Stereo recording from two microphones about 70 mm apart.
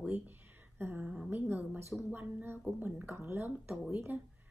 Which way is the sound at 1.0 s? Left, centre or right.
Centre.